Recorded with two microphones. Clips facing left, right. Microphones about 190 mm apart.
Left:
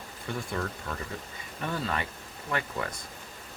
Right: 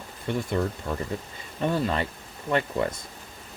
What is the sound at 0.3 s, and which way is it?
Speech, 25° right (ahead or behind).